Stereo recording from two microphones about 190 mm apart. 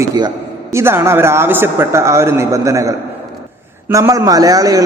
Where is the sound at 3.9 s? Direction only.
15° right (ahead or behind).